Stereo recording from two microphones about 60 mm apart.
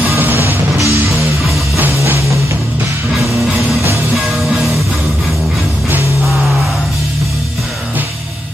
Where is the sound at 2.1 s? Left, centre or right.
Right.